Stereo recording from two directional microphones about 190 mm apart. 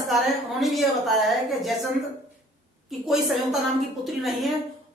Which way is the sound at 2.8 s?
Centre (ahead or behind).